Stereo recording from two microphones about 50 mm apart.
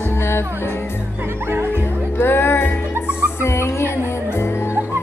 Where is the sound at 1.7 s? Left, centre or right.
Left.